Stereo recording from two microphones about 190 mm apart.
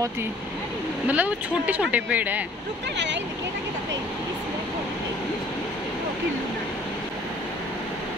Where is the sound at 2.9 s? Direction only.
70° right (ahead or behind).